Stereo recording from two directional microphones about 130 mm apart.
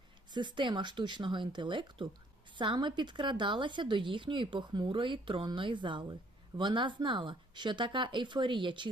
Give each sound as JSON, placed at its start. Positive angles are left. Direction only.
{"t": 0.3, "sound": "a woman's voice", "side_deg": -35}